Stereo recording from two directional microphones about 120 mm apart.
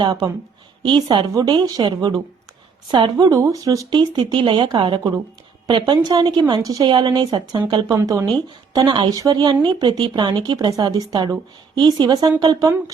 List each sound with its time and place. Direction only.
0.0 s a woman's voice: 35° right (ahead or behind)
6.9 s speech: 40° right (ahead or behind)
7.9 s a woman's voice: 25° right (ahead or behind)
8.7 s speech: 40° right (ahead or behind)